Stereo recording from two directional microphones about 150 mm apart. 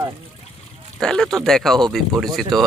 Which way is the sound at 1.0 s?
5° left (ahead or behind).